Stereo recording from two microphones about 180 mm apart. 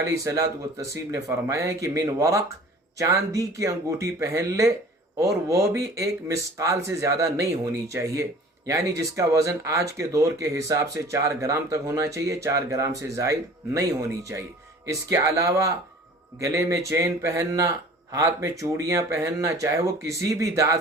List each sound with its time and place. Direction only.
0.1 s speech: 15° right (ahead or behind)